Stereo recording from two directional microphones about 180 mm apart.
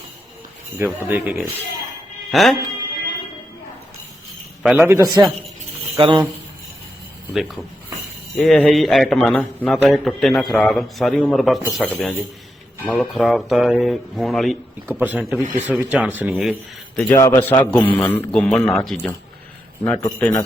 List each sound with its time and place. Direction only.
1.0 s a man's voice: 10° right (ahead or behind)
4.6 s speech: 5° right (ahead or behind)
4.9 s a man's voice: 20° right (ahead or behind)
7.3 s a man's voice: centre (ahead or behind)
17.1 s a man's voice: 20° left (ahead or behind)
17.7 s a man's voice: 5° left (ahead or behind)
19.8 s a man's voice: 10° left (ahead or behind)